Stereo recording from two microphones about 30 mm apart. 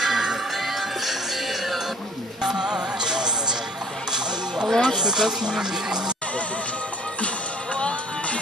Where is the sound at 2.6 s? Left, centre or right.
Right.